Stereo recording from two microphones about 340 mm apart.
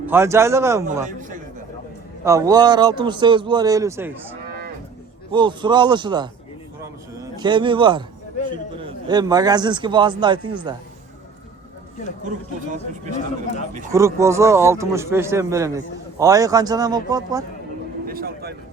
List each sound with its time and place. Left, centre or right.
0.0 s a man's voice: centre
2.2 s a man's voice: centre
4.4 s cattle: right
5.3 s a man's voice: centre
8.4 s a sound: left
8.8 s a man's voice: centre
13.9 s a man's voice: centre
18.0 s a sound: right